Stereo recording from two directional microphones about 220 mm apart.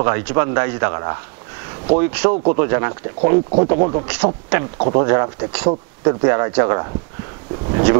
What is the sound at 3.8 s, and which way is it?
Speech, 30° right (ahead or behind).